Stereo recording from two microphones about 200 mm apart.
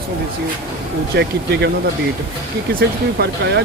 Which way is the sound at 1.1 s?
55° right (ahead or behind).